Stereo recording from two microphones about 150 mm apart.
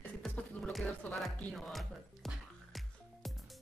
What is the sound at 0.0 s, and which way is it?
Music, 10° left (ahead or behind).